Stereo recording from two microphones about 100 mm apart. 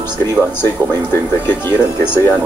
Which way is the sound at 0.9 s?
20° left (ahead or behind).